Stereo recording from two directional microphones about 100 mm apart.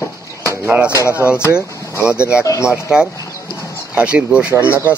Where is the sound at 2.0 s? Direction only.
10° right (ahead or behind).